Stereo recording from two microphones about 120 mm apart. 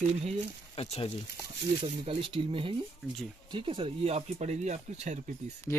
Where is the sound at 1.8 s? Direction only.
45° right (ahead or behind); by 5.1 s 75° right (ahead or behind).